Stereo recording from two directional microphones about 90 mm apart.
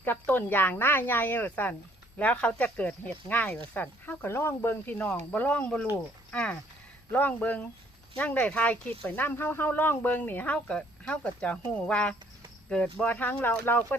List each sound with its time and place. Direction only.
0.0 s speech: 20° left (ahead or behind)